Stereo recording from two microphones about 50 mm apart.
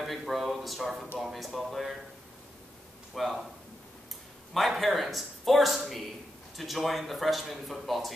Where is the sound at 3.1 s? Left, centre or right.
Centre.